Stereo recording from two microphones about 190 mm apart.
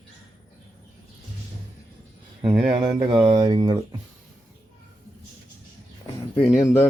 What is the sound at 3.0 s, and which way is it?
Speech, 25° right (ahead or behind).